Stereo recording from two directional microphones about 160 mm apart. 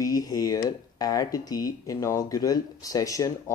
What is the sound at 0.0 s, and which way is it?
Speech, 20° left (ahead or behind).